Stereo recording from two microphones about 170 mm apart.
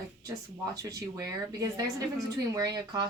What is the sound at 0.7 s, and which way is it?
A woman's voice, 20° right (ahead or behind).